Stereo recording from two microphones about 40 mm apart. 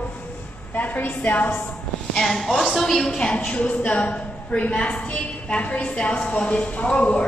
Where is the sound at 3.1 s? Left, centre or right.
Left.